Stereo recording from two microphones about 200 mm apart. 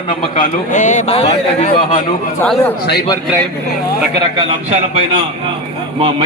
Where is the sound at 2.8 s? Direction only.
50° left (ahead or behind).